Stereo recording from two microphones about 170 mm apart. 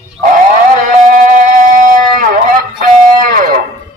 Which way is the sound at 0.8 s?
50° right (ahead or behind).